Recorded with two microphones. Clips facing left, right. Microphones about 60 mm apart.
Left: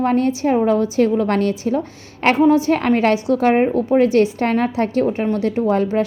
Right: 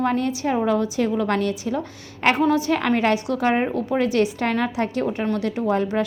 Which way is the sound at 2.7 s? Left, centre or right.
Left.